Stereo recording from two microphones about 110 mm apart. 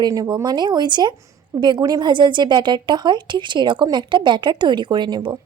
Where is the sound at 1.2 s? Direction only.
25° right (ahead or behind).